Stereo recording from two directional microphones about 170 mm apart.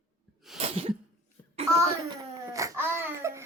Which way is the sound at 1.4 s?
10° left (ahead or behind).